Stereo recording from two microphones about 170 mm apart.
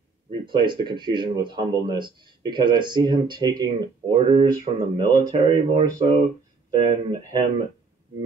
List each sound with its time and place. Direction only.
0.5 s speech: 30° right (ahead or behind)